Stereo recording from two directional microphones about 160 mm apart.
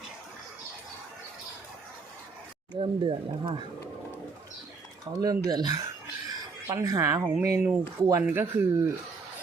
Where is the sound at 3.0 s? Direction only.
30° right (ahead or behind).